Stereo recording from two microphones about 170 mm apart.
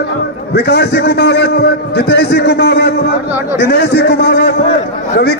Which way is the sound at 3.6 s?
75° left (ahead or behind).